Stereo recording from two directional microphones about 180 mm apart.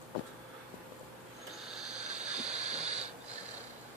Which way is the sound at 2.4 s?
40° right (ahead or behind).